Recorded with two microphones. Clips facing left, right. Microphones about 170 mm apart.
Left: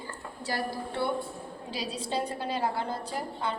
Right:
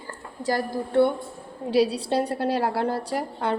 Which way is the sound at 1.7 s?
65° right (ahead or behind).